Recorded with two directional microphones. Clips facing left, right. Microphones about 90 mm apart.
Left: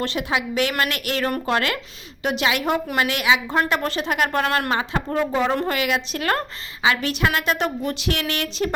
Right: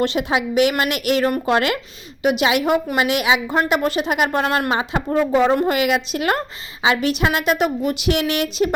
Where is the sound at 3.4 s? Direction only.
5° right (ahead or behind).